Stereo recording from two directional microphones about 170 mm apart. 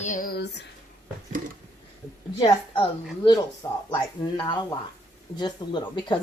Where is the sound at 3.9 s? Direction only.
25° left (ahead or behind).